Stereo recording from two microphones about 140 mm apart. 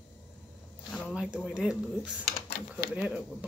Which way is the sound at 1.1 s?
5° right (ahead or behind).